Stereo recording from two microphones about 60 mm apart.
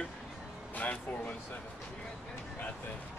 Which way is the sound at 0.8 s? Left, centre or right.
Left.